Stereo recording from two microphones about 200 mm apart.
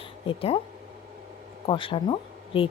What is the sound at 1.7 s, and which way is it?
Speech, 25° left (ahead or behind).